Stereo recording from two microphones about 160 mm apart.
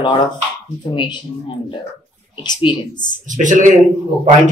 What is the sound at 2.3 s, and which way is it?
Speech, 30° left (ahead or behind).